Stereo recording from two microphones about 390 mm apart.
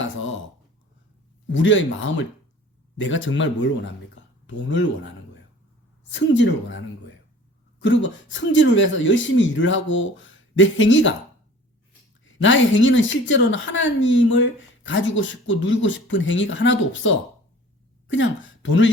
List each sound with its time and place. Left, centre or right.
0.0 s a sound: left
1.5 s speech: left
6.1 s speech: left
12.2 s speech: left